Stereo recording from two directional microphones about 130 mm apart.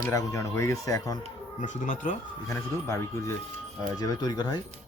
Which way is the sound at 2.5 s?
20° left (ahead or behind).